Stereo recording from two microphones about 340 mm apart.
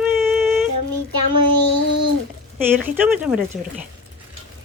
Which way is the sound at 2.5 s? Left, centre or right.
Centre.